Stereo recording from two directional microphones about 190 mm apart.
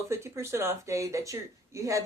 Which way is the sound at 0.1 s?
15° right (ahead or behind).